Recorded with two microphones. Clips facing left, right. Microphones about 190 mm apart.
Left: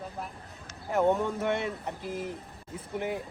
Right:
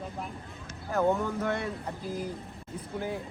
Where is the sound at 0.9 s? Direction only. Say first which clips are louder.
Left 1 dB; 20° left (ahead or behind).